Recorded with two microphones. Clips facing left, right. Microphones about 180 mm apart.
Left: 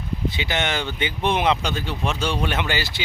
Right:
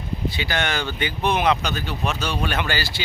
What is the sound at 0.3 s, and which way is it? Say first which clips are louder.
Speech: even; 20° left (ahead or behind).